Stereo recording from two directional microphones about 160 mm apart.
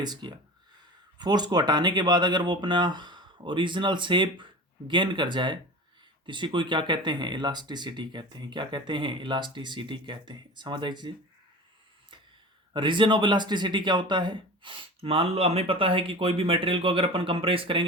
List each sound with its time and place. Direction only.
0.0 s speech: 25° right (ahead or behind)
12.7 s speech: 30° right (ahead or behind)